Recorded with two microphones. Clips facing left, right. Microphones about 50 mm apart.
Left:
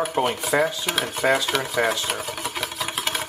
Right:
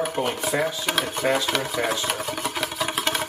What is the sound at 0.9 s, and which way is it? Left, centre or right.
Speech, centre.